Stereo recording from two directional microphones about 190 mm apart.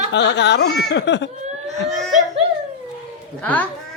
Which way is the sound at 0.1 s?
65° left (ahead or behind).